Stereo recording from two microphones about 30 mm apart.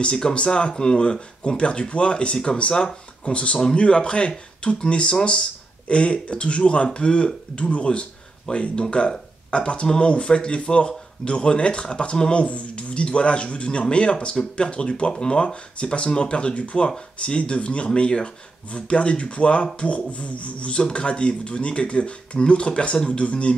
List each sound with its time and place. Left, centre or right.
0.3 s speech: left
16.5 s speech: left